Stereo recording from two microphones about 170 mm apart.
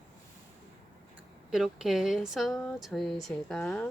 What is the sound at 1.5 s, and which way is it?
Speech, 5° right (ahead or behind).